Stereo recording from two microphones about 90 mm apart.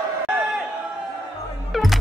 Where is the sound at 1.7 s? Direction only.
Centre (ahead or behind).